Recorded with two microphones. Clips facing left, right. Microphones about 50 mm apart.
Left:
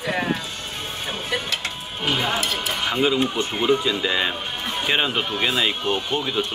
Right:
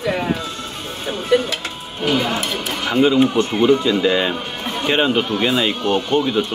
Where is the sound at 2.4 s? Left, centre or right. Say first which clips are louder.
Right 2 dB; centre.